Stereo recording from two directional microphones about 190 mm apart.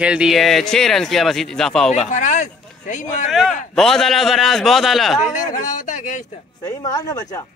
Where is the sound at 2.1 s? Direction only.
40° left (ahead or behind).